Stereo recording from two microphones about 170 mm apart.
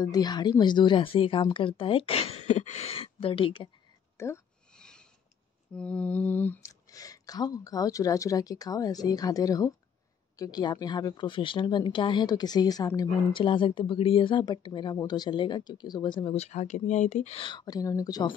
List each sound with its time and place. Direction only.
0.0 s speech: 25° left (ahead or behind)
4.2 s speech: 15° left (ahead or behind)
4.7 s a sound: 5° left (ahead or behind)
5.8 s a woman's voice: 5° left (ahead or behind)